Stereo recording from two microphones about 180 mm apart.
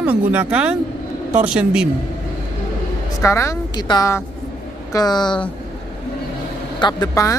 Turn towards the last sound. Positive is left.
turn(degrees=20)  # may be behind; listen again after turning